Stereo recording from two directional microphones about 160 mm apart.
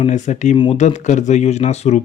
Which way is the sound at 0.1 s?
50° left (ahead or behind).